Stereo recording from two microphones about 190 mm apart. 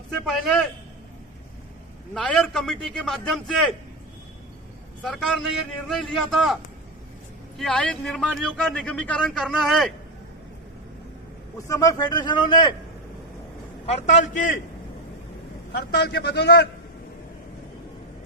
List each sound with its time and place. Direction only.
0.3 s a man's voice: centre (ahead or behind)
2.1 s a man's voice: 5° left (ahead or behind)
5.0 s a man's voice: centre (ahead or behind)
7.6 s a man's voice: 5° left (ahead or behind)
11.5 s speech: 15° left (ahead or behind)
13.8 s a man's voice: 40° left (ahead or behind)
15.7 s a man's voice: 60° left (ahead or behind)